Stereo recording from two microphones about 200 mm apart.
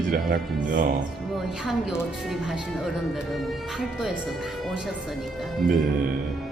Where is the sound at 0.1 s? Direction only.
45° right (ahead or behind).